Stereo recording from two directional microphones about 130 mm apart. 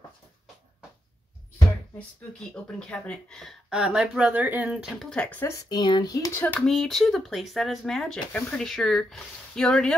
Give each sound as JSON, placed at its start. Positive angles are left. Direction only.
{"t": 2.0, "sound": "speech", "side_deg": 5}
{"t": 5.1, "sound": "speech", "side_deg": 10}
{"t": 6.6, "sound": "speech", "side_deg": 0}